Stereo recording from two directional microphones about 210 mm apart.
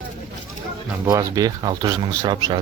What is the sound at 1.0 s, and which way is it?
Speech, 15° right (ahead or behind).